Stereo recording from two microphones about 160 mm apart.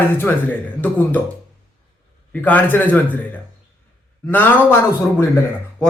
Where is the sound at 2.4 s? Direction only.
10° left (ahead or behind).